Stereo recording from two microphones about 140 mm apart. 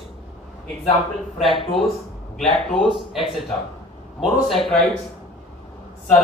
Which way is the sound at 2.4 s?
5° left (ahead or behind).